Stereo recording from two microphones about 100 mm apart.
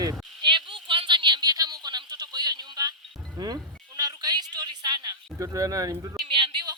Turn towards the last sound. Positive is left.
turn(degrees=-50)  # may be behind; listen again after turning